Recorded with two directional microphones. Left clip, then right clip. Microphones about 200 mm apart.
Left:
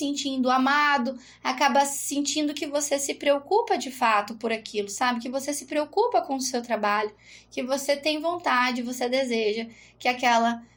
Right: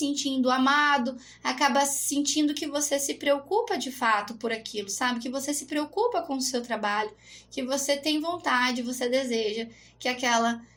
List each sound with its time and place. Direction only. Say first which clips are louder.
0.0 s a woman's voice: even; 30° left (ahead or behind)